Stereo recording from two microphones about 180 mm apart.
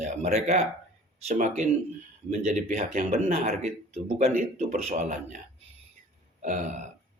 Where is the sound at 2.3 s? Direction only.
40° right (ahead or behind).